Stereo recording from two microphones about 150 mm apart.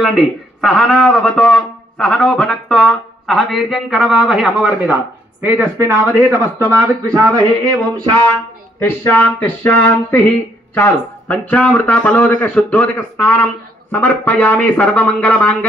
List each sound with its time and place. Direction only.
0.0 s speech: centre (ahead or behind)
5.4 s speech: 15° right (ahead or behind)
8.7 s speech: 15° left (ahead or behind)